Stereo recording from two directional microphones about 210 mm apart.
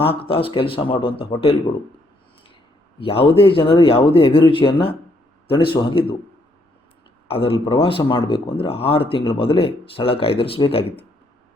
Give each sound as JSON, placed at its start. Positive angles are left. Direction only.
{"t": 0.0, "sound": "speech", "side_deg": 25}
{"t": 3.0, "sound": "speech", "side_deg": 25}
{"t": 7.3, "sound": "speech", "side_deg": 25}